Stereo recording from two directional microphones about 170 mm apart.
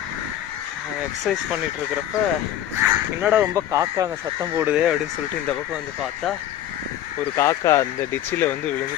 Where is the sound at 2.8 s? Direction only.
15° right (ahead or behind).